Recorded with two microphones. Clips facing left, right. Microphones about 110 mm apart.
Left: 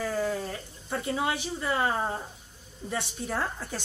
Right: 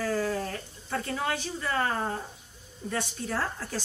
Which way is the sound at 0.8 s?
15° left (ahead or behind).